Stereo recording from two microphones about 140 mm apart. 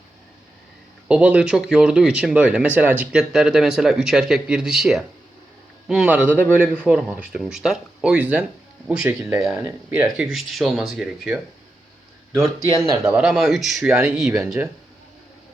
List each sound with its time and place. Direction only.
1.0 s a man's voice: 5° right (ahead or behind)
9.6 s speech: 30° right (ahead or behind)
10.2 s speech: centre (ahead or behind)
12.8 s speech: 25° right (ahead or behind)
13.1 s speech: 5° right (ahead or behind)